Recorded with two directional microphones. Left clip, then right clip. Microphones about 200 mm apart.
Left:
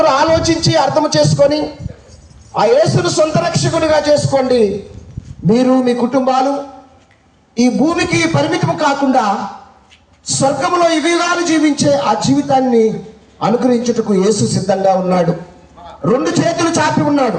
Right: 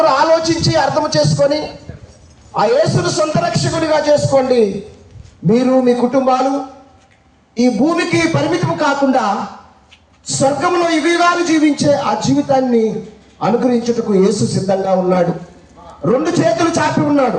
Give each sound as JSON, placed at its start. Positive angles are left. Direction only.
{"t": 0.0, "sound": "a man's voice", "side_deg": 40}
{"t": 7.5, "sound": "a man's voice", "side_deg": 55}
{"t": 10.2, "sound": "a man's voice", "side_deg": 55}